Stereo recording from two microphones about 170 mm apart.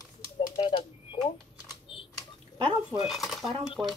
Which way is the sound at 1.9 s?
30° left (ahead or behind).